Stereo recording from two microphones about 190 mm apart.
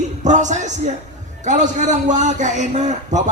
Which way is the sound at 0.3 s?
40° right (ahead or behind).